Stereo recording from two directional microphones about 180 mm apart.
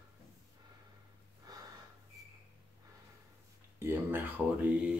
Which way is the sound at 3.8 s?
10° right (ahead or behind).